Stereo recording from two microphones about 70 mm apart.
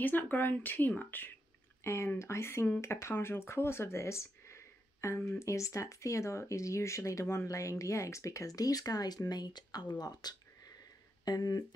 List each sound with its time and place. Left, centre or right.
0.0 s speech: left
1.8 s speech: left